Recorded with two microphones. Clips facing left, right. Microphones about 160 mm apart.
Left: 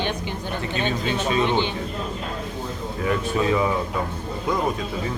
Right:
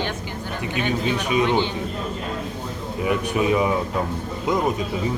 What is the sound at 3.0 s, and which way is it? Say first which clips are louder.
Speech: right 1 dB; 15° right (ahead or behind).